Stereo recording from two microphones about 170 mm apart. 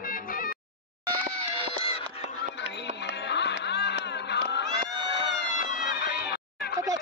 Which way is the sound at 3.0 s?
90° left.